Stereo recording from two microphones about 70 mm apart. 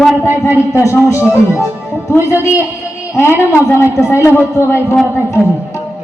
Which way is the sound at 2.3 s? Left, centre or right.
Left.